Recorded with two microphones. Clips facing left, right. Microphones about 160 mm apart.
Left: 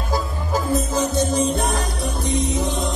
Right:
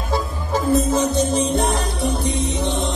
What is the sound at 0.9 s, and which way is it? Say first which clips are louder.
Music: right 1 dB; 25° right (ahead or behind).